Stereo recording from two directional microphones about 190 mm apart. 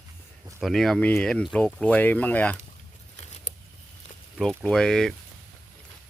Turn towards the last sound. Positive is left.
turn(degrees=5)  # may be behind; listen again after turning